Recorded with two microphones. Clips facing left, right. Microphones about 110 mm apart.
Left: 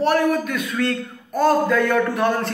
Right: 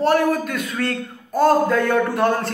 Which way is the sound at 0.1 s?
40° right (ahead or behind).